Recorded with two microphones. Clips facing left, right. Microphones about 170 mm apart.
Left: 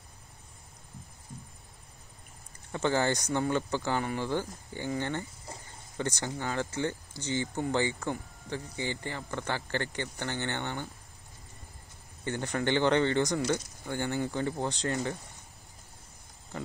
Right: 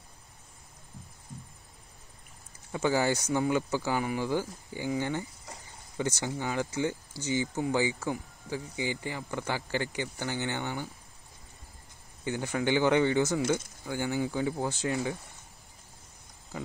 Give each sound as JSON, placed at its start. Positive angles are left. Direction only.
{"t": 2.7, "sound": "speech", "side_deg": -10}
{"t": 12.3, "sound": "speech", "side_deg": -10}
{"t": 16.5, "sound": "speech", "side_deg": -10}